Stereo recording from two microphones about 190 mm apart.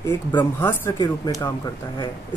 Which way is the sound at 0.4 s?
10° left (ahead or behind).